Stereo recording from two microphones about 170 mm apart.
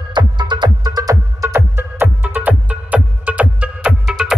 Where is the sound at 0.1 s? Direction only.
25° right (ahead or behind).